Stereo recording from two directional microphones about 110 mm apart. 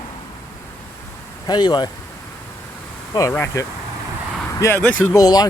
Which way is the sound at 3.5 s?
30° left (ahead or behind).